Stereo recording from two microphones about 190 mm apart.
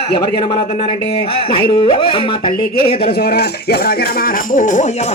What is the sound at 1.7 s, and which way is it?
A man's voice, 25° left (ahead or behind).